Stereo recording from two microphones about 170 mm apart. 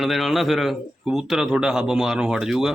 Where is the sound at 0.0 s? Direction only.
Centre (ahead or behind).